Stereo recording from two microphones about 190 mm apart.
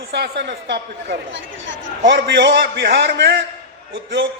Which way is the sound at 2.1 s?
65° right (ahead or behind).